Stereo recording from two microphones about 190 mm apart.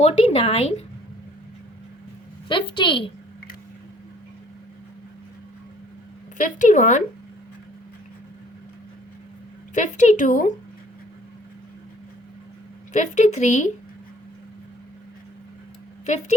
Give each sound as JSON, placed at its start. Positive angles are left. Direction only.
{"t": 0.0, "sound": "speech", "side_deg": 30}
{"t": 2.5, "sound": "a woman's voice", "side_deg": 25}
{"t": 6.3, "sound": "speech", "side_deg": 45}
{"t": 9.7, "sound": "speech", "side_deg": 40}
{"t": 12.9, "sound": "speech", "side_deg": 40}